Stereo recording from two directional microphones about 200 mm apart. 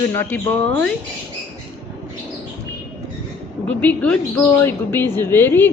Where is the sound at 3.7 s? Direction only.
5° left (ahead or behind).